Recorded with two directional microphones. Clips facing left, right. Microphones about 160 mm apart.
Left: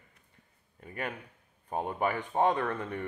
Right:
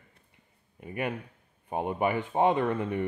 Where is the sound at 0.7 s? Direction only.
10° right (ahead or behind).